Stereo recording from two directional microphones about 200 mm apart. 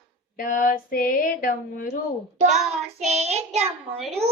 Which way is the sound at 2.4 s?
Centre (ahead or behind).